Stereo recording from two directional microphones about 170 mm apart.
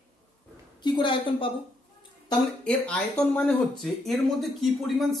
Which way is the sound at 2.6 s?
5° left (ahead or behind).